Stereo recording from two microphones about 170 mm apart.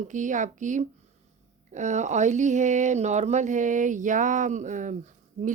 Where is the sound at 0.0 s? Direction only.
45° right (ahead or behind).